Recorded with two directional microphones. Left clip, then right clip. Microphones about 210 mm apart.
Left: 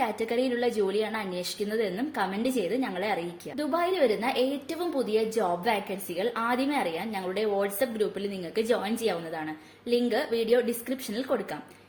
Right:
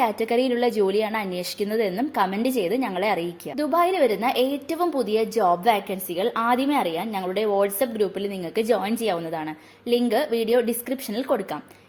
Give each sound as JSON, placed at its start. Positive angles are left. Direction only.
{"t": 0.0, "sound": "a woman's voice", "side_deg": -35}